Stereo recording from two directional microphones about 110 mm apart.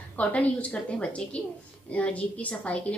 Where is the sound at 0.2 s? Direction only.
10° left (ahead or behind).